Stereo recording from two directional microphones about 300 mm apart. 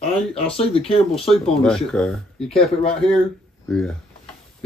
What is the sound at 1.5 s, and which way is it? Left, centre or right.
Speech, centre.